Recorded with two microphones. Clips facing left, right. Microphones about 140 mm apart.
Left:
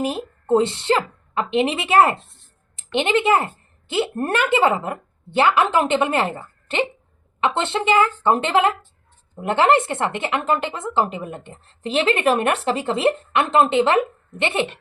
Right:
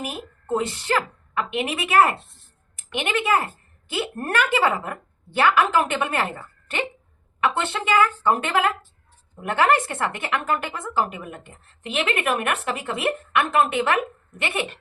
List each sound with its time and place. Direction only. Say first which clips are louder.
0.0 s a woman's voice: left 8 dB; 30° left (ahead or behind)